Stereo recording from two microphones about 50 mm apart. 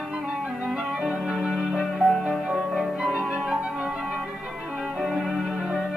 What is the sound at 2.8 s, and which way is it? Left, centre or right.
Music, centre.